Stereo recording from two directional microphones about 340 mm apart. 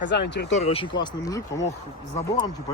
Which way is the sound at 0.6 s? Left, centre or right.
Centre.